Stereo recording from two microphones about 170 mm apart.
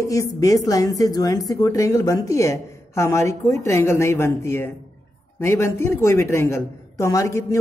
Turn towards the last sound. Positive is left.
turn(degrees=20)  # may be behind; listen again after turning